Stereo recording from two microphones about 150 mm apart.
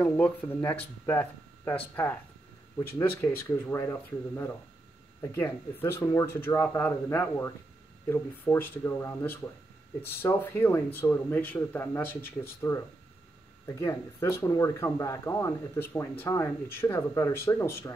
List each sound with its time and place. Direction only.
0.0 s speech: 15° left (ahead or behind)